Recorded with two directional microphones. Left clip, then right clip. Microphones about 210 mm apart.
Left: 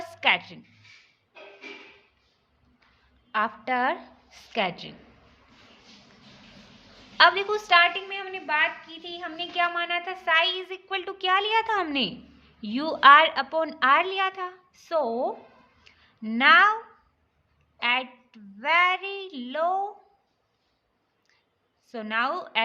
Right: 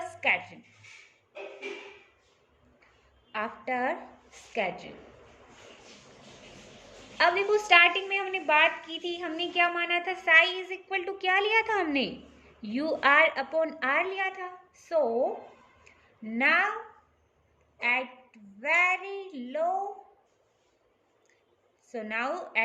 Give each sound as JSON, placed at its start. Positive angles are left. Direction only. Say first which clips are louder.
{"t": 0.0, "sound": "a sound", "louder": "left 4 dB", "side_deg": 40}
{"t": 3.3, "sound": "a woman's voice", "louder": "left 6 dB", "side_deg": 40}
{"t": 7.2, "sound": "a woman's voice", "louder": "left 4 dB", "side_deg": 40}
{"t": 17.7, "sound": "a woman's voice", "louder": "left 3 dB", "side_deg": 40}
{"t": 21.8, "sound": "a woman's voice", "louder": "left 5 dB", "side_deg": 40}